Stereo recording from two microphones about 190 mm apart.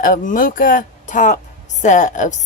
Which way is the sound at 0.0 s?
45° left (ahead or behind).